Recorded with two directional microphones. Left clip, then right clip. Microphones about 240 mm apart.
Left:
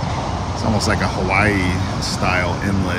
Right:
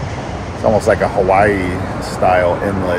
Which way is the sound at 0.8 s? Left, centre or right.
Centre.